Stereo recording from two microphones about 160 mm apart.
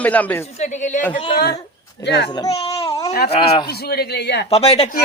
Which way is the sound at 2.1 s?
90° left.